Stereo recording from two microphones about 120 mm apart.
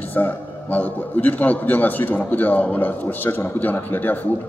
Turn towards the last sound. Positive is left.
turn(degrees=15)  # may be behind; listen again after turning